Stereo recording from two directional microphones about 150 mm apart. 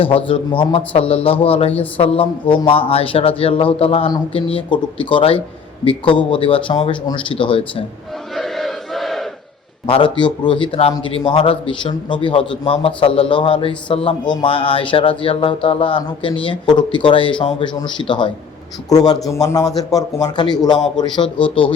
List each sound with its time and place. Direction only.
0.3 s a man's voice: 35° left (ahead or behind)
8.4 s battle cry: centre (ahead or behind)
9.8 s a man's voice: 35° left (ahead or behind)